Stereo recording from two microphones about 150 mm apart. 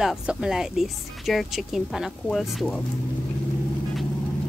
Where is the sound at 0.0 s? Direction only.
5° right (ahead or behind).